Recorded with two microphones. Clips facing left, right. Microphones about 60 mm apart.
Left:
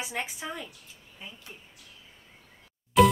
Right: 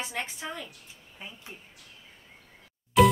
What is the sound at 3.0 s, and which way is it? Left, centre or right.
Music, centre.